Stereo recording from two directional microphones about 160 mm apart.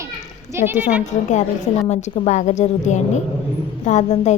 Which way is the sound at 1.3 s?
45° left (ahead or behind).